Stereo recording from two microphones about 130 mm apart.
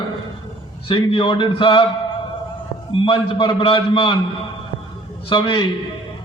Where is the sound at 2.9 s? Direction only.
40° left (ahead or behind).